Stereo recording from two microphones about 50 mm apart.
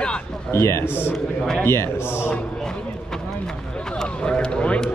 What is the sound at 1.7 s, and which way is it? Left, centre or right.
Speech, left.